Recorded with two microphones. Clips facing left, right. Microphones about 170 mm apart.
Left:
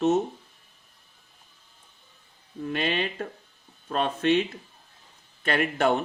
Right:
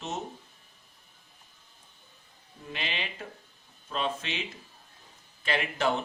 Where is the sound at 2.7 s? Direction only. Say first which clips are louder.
Left 9 dB; 55° left (ahead or behind).